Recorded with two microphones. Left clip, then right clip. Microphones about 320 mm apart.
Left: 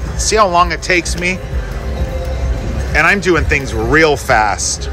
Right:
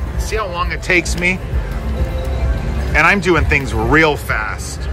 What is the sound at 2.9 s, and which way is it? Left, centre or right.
Speech, centre.